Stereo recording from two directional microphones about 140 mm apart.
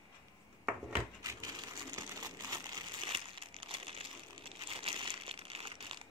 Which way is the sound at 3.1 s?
40° right (ahead or behind).